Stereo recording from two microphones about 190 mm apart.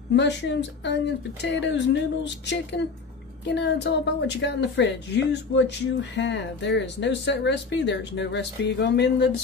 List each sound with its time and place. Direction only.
0.1 s a woman's voice: 65° left (ahead or behind)